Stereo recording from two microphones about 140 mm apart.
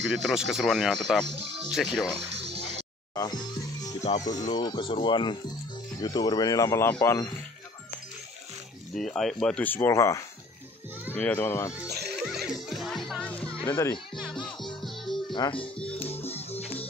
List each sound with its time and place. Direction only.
0.0 s speech: centre (ahead or behind)
1.2 s speech: 45° right (ahead or behind)
1.7 s speech: centre (ahead or behind)
2.3 s music: 45° right (ahead or behind)
3.2 s music: 30° left (ahead or behind)
4.2 s speech: 25° left (ahead or behind)
8.9 s speech: 5° left (ahead or behind)
11.8 s music: 5° right (ahead or behind)
13.7 s speech: 20° left (ahead or behind)
14.4 s music: 5° left (ahead or behind)
15.3 s speech: 35° left (ahead or behind)
16.0 s music: 45° left (ahead or behind)